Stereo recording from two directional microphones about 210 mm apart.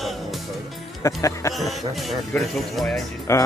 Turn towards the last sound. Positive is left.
turn(degrees=15)  # may be behind; listen again after turning